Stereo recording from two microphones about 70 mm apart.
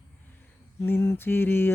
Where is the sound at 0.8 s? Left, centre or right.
Left.